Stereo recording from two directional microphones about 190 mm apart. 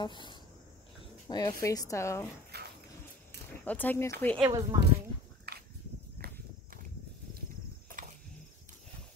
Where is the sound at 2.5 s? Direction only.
55° right (ahead or behind).